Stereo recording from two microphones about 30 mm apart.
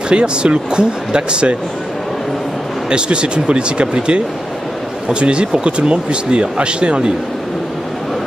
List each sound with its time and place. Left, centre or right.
0.1 s speech: right
2.9 s speech: right